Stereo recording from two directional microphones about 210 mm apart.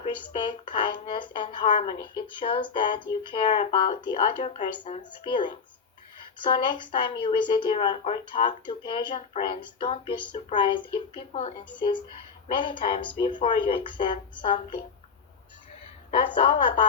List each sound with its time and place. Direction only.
0.0 s speech: 25° left (ahead or behind)
16.1 s speech: 25° left (ahead or behind)